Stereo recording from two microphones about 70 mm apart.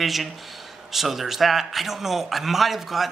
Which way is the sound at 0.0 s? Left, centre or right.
Centre.